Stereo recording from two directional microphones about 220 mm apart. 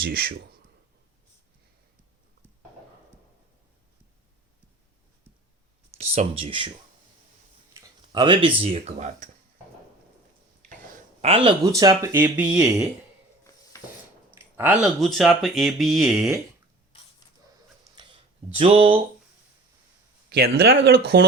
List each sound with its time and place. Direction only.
0.0 s speech: 45° right (ahead or behind)
6.0 s speech: 25° right (ahead or behind)
7.8 s speech: 20° right (ahead or behind)
11.2 s speech: 25° right (ahead or behind); by 12.6 s 5° right (ahead or behind)
14.3 s speech: 10° right (ahead or behind)
17.9 s a sound: 20° right (ahead or behind)
20.3 s speech: 45° right (ahead or behind)